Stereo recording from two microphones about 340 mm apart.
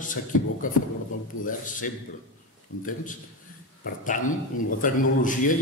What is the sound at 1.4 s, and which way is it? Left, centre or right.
Speech, left.